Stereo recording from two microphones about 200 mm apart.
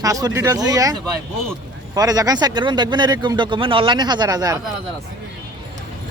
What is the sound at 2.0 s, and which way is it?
Speech, 20° right (ahead or behind).